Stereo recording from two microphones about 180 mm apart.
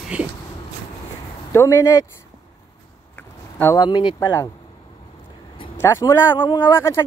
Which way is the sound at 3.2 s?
10° left (ahead or behind).